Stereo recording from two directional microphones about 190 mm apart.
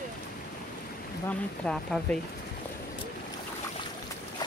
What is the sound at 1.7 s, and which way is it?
Speech, 5° left (ahead or behind).